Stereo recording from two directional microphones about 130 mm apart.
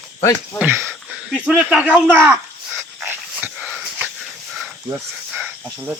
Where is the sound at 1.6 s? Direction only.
10° right (ahead or behind).